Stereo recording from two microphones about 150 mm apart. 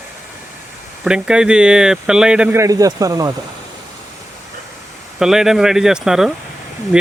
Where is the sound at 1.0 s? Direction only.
5° right (ahead or behind).